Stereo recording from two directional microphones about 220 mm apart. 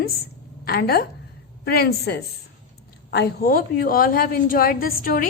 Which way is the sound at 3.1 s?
45° left (ahead or behind).